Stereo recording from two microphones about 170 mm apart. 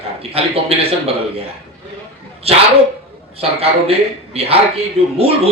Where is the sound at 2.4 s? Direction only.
35° right (ahead or behind).